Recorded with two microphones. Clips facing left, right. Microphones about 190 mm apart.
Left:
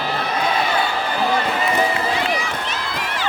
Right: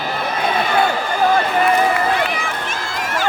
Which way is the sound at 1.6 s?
55° right (ahead or behind).